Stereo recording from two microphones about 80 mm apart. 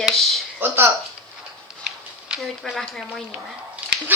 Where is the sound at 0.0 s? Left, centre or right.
Centre.